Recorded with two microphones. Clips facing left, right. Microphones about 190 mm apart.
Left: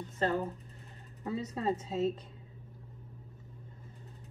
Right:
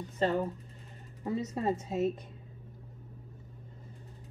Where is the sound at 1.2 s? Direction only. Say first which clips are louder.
Right 2 dB; 15° right (ahead or behind).